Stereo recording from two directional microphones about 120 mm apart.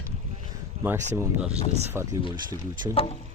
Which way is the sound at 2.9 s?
55° left (ahead or behind).